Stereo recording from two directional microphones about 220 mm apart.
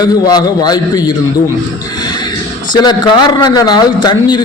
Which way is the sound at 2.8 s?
20° left (ahead or behind).